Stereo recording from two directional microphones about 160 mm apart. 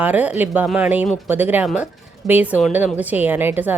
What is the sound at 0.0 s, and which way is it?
A woman's voice, 10° right (ahead or behind).